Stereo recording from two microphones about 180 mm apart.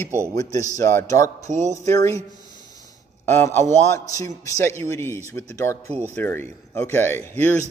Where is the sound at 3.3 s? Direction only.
10° left (ahead or behind).